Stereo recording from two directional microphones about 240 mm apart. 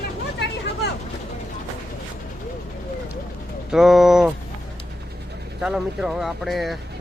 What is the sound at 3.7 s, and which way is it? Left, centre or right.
Speech, centre.